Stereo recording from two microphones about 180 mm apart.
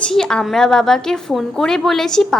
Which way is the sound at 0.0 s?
5° left (ahead or behind).